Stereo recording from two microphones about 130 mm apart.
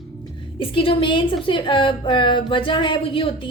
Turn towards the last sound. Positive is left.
turn(degrees=40)  # may be behind; listen again after turning